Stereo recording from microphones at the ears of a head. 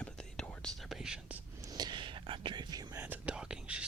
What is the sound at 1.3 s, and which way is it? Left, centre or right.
Whispering, right.